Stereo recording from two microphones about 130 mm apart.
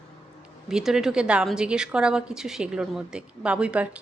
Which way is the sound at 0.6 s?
5° right (ahead or behind).